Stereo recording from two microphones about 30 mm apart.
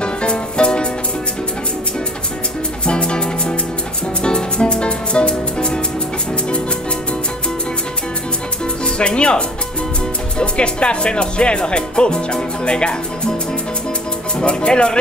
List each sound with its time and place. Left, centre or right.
0.0 s music: left
2.8 s music: left
8.8 s speech: left
10.4 s speech: left
14.4 s speech: left